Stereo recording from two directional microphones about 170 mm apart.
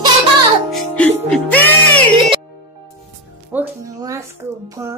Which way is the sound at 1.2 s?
5° left (ahead or behind).